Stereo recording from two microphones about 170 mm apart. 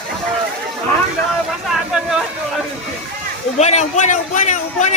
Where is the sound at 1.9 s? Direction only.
5° right (ahead or behind).